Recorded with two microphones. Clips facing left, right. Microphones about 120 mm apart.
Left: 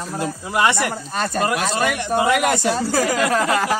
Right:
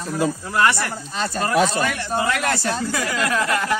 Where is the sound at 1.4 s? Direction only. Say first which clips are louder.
Right 3 dB; 15° left (ahead or behind).